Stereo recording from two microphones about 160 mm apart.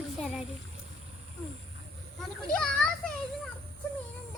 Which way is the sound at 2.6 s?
5° left (ahead or behind).